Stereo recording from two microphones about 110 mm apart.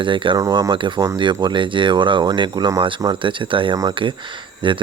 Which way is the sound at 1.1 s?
45° right (ahead or behind).